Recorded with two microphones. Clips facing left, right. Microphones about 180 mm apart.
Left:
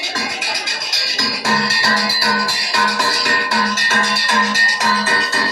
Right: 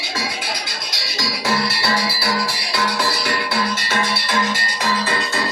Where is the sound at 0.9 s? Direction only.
50° left (ahead or behind).